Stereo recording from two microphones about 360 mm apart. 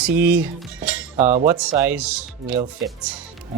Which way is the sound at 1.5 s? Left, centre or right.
Centre.